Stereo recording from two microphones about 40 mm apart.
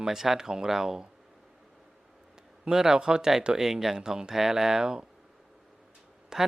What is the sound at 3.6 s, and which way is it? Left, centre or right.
Speech, centre.